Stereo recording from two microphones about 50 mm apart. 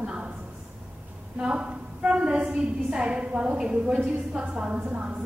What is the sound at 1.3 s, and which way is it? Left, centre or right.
A woman's voice, centre.